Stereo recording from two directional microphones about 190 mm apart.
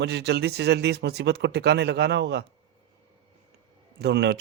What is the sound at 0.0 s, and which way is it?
Speech, 60° right (ahead or behind).